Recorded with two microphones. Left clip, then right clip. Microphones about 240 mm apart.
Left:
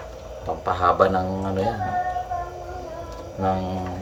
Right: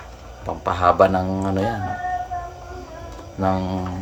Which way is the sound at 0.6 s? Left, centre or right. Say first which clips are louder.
Right 3 dB; right.